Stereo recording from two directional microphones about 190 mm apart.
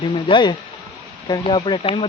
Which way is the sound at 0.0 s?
25° left (ahead or behind).